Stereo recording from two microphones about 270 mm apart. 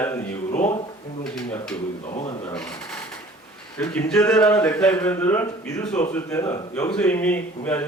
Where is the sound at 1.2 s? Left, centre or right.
Centre.